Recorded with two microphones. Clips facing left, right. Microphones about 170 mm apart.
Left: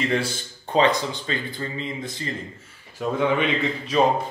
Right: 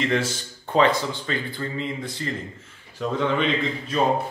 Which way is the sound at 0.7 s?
20° left (ahead or behind).